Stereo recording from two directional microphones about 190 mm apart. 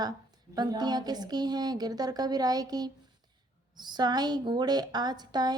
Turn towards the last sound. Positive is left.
turn(degrees=-20)  # may be behind; listen again after turning